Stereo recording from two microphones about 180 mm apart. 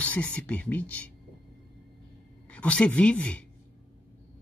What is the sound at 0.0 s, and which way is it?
Speech, 5° left (ahead or behind).